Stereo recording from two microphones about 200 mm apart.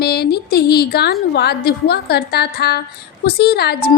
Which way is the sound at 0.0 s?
50° left (ahead or behind).